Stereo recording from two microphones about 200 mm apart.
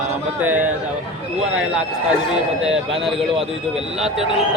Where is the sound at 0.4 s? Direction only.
10° right (ahead or behind).